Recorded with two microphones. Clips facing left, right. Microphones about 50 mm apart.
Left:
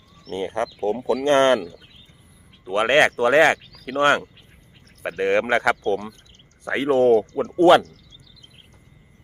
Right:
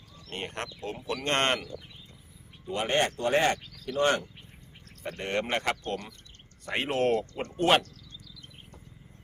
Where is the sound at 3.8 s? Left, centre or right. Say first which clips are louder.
Left 7 dB; left.